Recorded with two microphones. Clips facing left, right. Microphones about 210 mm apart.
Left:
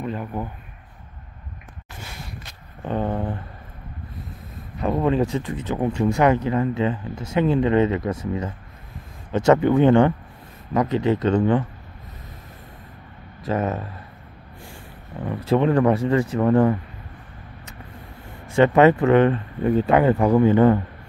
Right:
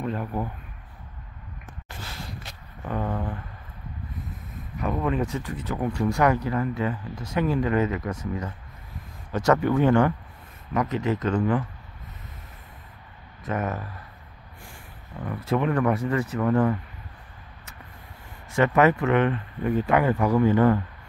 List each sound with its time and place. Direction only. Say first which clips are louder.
0.0 s a sound: left 1 dB; centre (ahead or behind)
2.8 s speech: left 4 dB; 30° left (ahead or behind)
4.7 s speech: left 5 dB; 30° left (ahead or behind)
13.5 s speech: left 5 dB; 25° left (ahead or behind)
15.2 s speech: left 5 dB; 30° left (ahead or behind)
18.6 s speech: left 5 dB; 30° left (ahead or behind)